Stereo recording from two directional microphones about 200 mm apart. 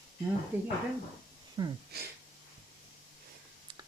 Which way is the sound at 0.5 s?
10° right (ahead or behind).